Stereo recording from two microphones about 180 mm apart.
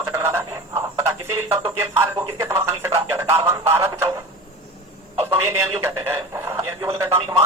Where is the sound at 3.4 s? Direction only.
15° right (ahead or behind).